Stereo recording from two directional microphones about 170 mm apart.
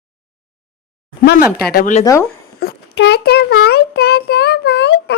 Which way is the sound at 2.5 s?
75° left (ahead or behind).